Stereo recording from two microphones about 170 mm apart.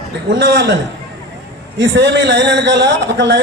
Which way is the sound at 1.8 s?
90° right.